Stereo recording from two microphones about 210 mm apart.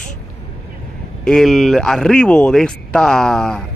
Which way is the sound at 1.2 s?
Centre (ahead or behind).